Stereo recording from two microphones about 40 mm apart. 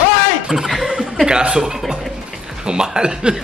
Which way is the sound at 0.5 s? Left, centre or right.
Centre.